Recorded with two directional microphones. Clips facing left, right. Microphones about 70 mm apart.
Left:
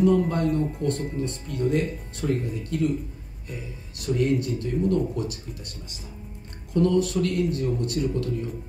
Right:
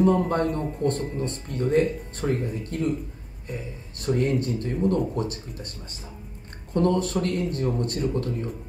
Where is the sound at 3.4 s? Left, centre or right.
Right.